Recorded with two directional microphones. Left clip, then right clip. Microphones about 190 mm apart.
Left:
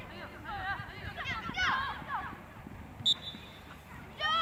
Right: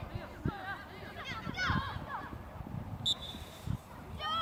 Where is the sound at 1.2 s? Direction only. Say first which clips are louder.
Left 4 dB; 5° left (ahead or behind).